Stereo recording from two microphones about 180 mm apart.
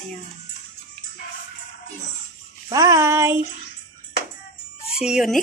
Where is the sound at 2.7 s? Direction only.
20° right (ahead or behind).